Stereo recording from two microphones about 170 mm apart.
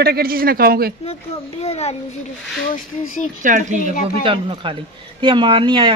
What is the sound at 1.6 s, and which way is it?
Speech, 40° left (ahead or behind).